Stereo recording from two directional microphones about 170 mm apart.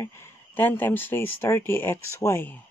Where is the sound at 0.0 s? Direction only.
15° left (ahead or behind).